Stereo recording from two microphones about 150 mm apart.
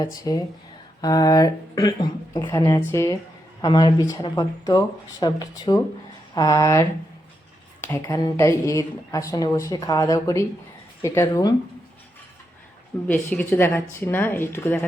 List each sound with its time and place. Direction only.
0.2 s a woman's voice: 25° left (ahead or behind)
7.9 s a woman's voice: 20° left (ahead or behind)
13.1 s speech: 10° left (ahead or behind)